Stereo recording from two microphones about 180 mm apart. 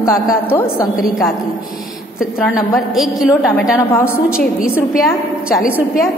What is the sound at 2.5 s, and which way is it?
A woman's voice, centre (ahead or behind).